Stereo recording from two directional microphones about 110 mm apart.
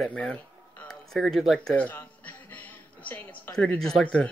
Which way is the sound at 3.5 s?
5° left (ahead or behind).